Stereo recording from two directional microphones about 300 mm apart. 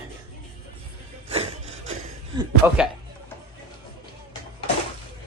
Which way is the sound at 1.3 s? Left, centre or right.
Centre.